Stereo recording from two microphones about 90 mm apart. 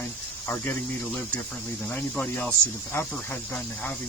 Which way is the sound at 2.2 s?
15° left (ahead or behind).